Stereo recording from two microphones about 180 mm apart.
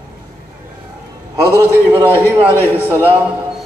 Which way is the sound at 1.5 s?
10° right (ahead or behind).